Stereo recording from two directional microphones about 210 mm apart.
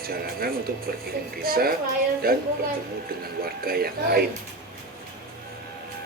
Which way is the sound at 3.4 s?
45° right (ahead or behind).